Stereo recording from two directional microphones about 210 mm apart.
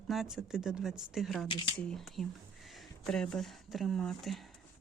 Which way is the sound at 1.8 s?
Centre (ahead or behind).